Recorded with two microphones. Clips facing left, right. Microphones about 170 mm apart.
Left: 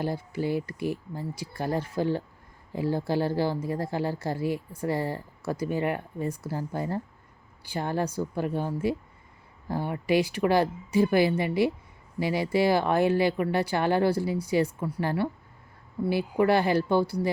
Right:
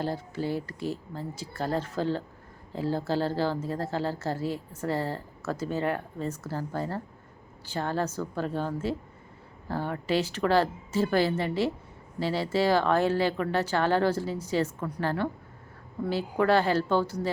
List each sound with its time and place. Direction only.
0.0 s a woman's voice: 15° left (ahead or behind)